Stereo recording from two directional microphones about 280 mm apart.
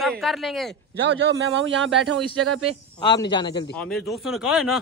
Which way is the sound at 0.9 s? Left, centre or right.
Right.